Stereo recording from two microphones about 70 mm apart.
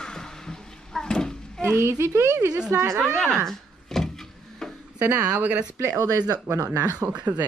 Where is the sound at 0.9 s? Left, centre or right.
Centre.